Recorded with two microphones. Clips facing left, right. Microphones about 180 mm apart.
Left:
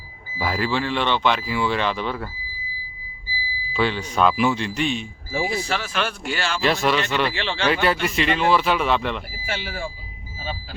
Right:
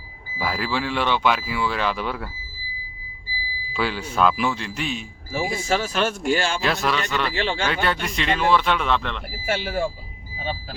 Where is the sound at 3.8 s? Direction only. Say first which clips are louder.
Left 1 dB; 5° right (ahead or behind).